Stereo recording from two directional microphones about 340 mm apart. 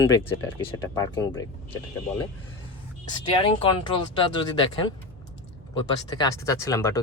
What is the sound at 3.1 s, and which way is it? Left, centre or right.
Speech, centre.